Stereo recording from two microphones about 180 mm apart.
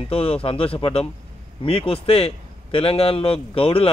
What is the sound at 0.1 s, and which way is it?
Speech, 30° left (ahead or behind).